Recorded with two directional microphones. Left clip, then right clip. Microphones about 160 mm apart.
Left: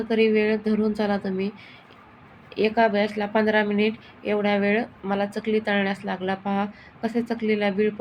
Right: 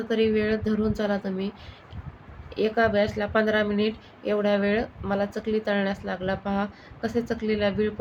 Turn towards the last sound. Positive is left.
turn(degrees=5)  # may be behind; listen again after turning